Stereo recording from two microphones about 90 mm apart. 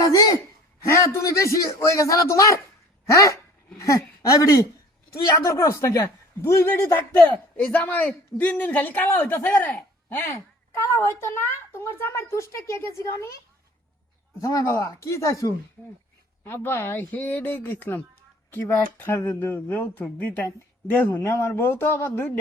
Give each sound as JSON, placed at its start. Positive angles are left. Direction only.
{"t": 0.0, "sound": "a sound", "side_deg": 40}
{"t": 0.9, "sound": "a man's voice", "side_deg": 35}
{"t": 14.4, "sound": "a woman's voice", "side_deg": 35}
{"t": 16.4, "sound": "a man's voice", "side_deg": 25}
{"t": 21.2, "sound": "a man's voice", "side_deg": 30}